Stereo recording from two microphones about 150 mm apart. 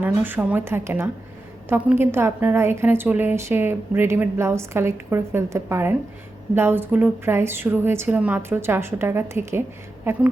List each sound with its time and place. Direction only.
0.0 s a woman's voice: 10° right (ahead or behind)